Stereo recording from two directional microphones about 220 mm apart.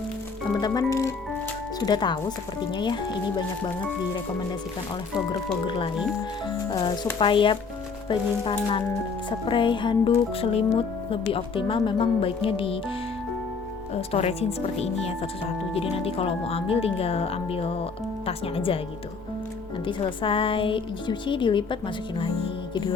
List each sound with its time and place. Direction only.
0.5 s speech: 15° left (ahead or behind)
5.6 s speech: 20° left (ahead or behind)
13.9 s speech: 30° left (ahead or behind)
19.8 s speech: 20° left (ahead or behind)